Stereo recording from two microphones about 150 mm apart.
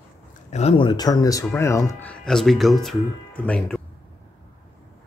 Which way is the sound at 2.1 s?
5° left (ahead or behind).